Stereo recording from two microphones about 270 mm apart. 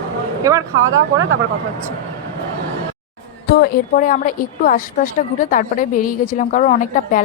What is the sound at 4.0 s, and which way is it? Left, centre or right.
A woman's voice, left.